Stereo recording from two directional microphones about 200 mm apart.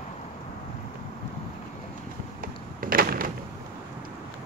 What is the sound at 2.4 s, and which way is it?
Door, 45° right (ahead or behind).